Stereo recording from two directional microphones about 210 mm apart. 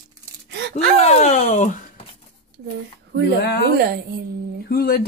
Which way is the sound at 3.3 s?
50° left (ahead or behind).